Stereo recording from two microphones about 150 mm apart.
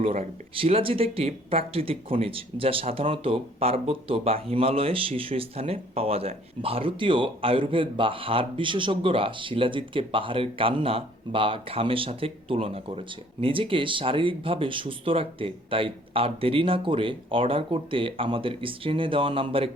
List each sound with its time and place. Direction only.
0.0 s speech: 40° right (ahead or behind)